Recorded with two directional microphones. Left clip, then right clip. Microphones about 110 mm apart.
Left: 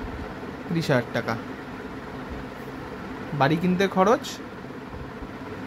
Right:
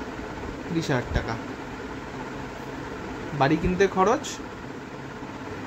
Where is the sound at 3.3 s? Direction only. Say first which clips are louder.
Even; 40° left (ahead or behind).